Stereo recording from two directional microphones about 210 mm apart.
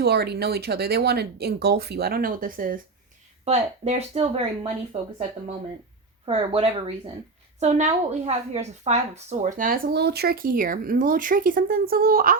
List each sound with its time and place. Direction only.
0.0 s speech: 50° right (ahead or behind)
3.4 s a woman's voice: 30° right (ahead or behind)
6.2 s a woman's voice: 25° right (ahead or behind); by 12.4 s 45° right (ahead or behind)